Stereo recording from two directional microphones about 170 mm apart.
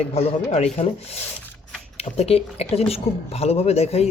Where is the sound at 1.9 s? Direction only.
35° left (ahead or behind).